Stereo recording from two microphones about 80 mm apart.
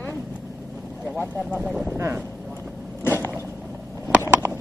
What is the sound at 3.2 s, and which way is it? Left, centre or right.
Vehicle, right.